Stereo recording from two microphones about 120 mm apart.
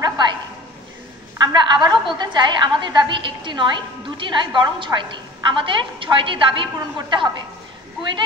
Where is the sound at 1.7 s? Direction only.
40° right (ahead or behind).